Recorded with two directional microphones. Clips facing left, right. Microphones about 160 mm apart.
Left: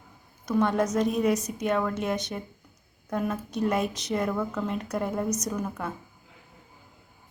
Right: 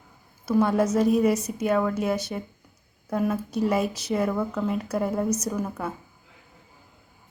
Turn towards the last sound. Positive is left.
turn(degrees=-5)  # may be behind; listen again after turning